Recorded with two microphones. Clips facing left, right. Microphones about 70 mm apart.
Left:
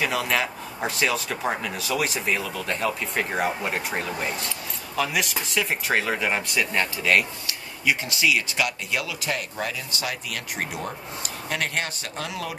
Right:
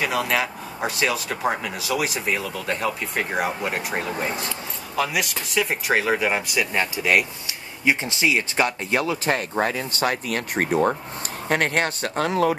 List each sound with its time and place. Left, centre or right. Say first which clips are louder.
0.0 s speech: right 2 dB; centre
7.8 s speech: right 2 dB; right